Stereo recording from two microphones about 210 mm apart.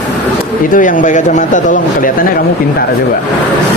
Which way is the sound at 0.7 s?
40° left (ahead or behind).